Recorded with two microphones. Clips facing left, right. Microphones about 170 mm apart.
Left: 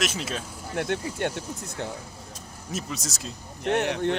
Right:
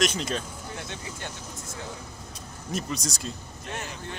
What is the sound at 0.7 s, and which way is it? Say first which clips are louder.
Speech: left 15 dB; 60° left (ahead or behind).